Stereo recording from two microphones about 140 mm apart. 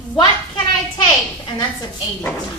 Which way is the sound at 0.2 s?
30° left (ahead or behind).